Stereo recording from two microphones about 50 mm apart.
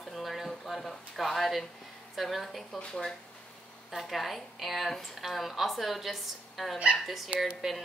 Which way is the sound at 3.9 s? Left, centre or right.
Centre.